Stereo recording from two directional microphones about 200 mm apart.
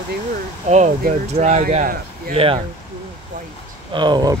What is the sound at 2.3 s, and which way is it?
Speech, 25° right (ahead or behind).